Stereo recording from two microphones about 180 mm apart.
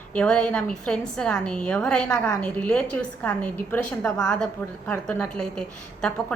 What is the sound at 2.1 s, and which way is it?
A woman's voice, 15° left (ahead or behind).